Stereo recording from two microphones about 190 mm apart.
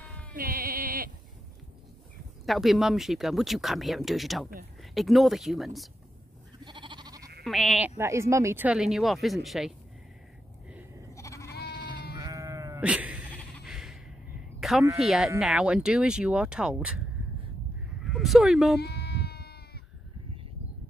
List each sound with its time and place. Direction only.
0.0 s a sound: 5° left (ahead or behind)
0.3 s sheep: 50° right (ahead or behind)
2.4 s speech: centre (ahead or behind)
6.6 s goat: 25° right (ahead or behind)
7.4 s speech: centre (ahead or behind)
8.0 s speech: 15° right (ahead or behind)
11.1 s sheep: 15° left (ahead or behind)
12.2 s sheep: 20° right (ahead or behind)
13.7 s a sound: centre (ahead or behind)
15.0 s speech: centre (ahead or behind)
18.0 s speech: centre (ahead or behind)
18.8 s sheep: 60° left (ahead or behind)